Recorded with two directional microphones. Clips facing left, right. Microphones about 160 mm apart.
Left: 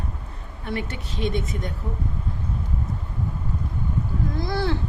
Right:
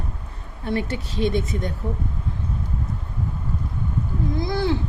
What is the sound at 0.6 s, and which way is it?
Speech, 35° right (ahead or behind).